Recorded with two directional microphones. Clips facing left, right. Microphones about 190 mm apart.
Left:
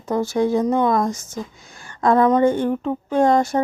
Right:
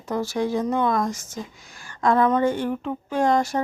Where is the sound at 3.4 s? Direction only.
25° left (ahead or behind).